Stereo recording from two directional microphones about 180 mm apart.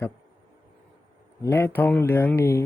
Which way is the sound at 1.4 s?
15° left (ahead or behind).